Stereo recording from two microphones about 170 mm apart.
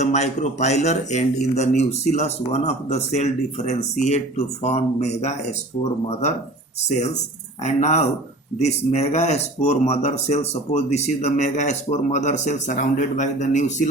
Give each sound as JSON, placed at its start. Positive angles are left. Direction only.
{"t": 0.0, "sound": "a man's voice", "side_deg": 40}
{"t": 6.9, "sound": "a man's voice", "side_deg": 40}